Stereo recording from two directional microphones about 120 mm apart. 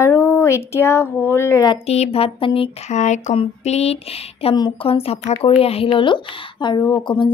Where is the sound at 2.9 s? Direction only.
75° left (ahead or behind).